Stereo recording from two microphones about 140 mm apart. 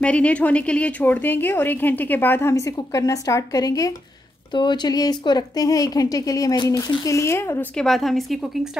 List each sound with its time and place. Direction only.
0.0 s a woman's voice: 10° left (ahead or behind)
7.7 s a woman's voice: centre (ahead or behind)